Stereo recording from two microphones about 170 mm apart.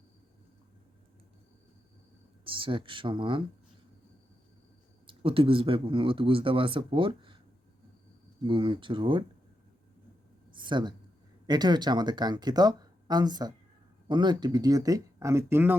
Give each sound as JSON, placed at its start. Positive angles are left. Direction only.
{"t": 2.4, "sound": "speech", "side_deg": -30}
{"t": 5.0, "sound": "speech", "side_deg": -30}
{"t": 8.4, "sound": "speech", "side_deg": -30}
{"t": 10.5, "sound": "a sound", "side_deg": -30}
{"t": 11.4, "sound": "speech", "side_deg": -25}